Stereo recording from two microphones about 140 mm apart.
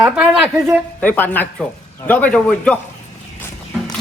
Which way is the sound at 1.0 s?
10° left (ahead or behind).